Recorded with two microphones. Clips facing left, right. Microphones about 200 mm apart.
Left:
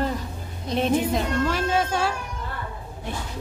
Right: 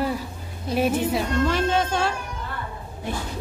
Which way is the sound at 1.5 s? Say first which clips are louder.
Right 1 dB; 5° left (ahead or behind).